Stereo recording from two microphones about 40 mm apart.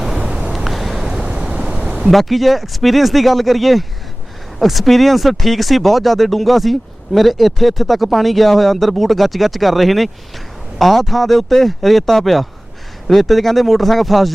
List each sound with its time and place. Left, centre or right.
0.0 s waves: centre
1.7 s a sound: right
2.0 s speech: centre